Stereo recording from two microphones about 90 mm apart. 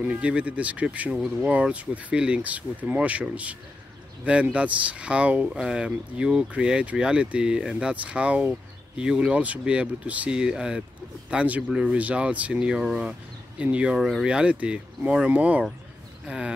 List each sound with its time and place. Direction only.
0.0 s speech: 15° right (ahead or behind)
1.1 s speech: 5° right (ahead or behind)
1.5 s speech: 15° right (ahead or behind)
13.9 s speech: centre (ahead or behind)
14.2 s speech: 10° right (ahead or behind)